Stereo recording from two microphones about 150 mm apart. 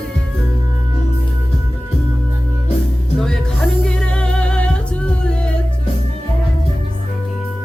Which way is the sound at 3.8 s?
5° left (ahead or behind).